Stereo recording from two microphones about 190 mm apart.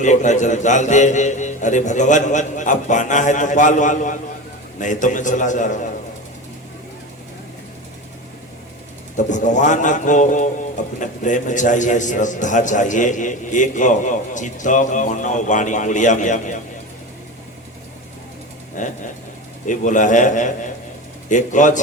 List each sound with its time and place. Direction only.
0.0 s a man's voice: 40° left (ahead or behind)
9.1 s a man's voice: 40° left (ahead or behind)
18.8 s a man's voice: 40° left (ahead or behind)